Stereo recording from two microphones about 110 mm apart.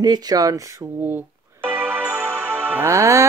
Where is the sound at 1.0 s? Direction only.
20° right (ahead or behind).